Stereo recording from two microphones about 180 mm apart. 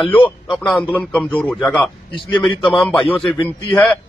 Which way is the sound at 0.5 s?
Centre (ahead or behind).